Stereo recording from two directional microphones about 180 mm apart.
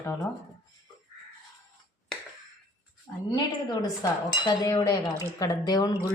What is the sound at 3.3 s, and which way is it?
Speech, 20° left (ahead or behind).